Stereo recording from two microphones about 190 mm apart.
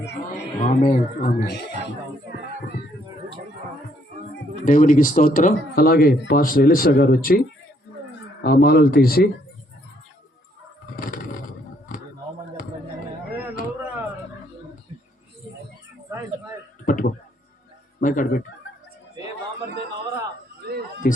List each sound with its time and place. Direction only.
0.3 s a man's voice: 35° left (ahead or behind)
4.6 s speech: 45° left (ahead or behind)
8.4 s speech: 55° left (ahead or behind)
10.9 s vehicle: 45° left (ahead or behind)
13.4 s a sound: 10° right (ahead or behind)
16.8 s a sound: 45° left (ahead or behind)
18.0 s speech: 45° left (ahead or behind)